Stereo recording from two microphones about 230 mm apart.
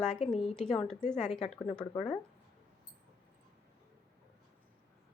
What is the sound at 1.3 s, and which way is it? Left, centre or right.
Speech, left.